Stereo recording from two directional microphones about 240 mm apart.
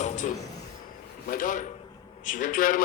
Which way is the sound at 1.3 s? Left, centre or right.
Left.